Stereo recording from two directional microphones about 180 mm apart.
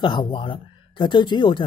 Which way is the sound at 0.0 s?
25° left (ahead or behind).